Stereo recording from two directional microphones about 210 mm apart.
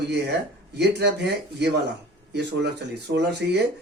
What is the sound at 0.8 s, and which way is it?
Speech, 55° right (ahead or behind).